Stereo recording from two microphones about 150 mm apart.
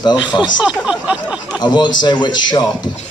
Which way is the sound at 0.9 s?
5° right (ahead or behind).